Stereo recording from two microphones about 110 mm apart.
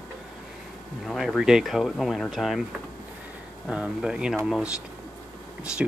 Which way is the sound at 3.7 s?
5° right (ahead or behind).